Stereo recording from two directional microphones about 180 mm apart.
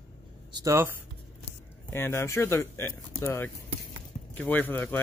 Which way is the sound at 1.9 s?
15° left (ahead or behind).